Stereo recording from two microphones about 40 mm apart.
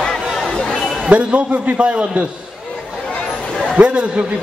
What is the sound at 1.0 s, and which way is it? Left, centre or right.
A man's voice, right.